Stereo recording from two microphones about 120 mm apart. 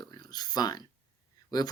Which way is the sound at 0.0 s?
35° left (ahead or behind).